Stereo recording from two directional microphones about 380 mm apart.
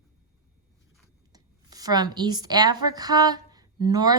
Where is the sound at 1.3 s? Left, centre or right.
Centre.